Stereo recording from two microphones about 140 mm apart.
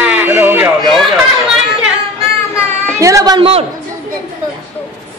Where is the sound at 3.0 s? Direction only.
25° right (ahead or behind).